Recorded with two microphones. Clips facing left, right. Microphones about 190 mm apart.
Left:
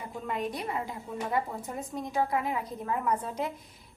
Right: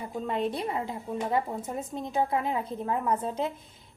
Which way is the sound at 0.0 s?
30° right (ahead or behind).